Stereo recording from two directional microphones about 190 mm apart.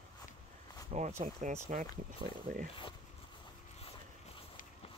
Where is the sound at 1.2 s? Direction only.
40° right (ahead or behind).